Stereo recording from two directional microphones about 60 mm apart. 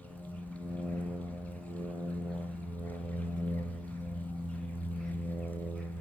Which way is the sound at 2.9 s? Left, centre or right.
Left.